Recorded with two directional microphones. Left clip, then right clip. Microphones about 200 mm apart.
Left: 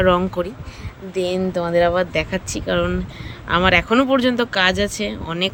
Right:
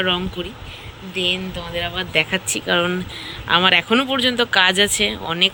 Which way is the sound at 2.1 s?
10° left (ahead or behind).